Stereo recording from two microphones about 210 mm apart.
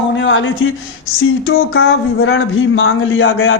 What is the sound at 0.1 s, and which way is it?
Speech, 65° left (ahead or behind).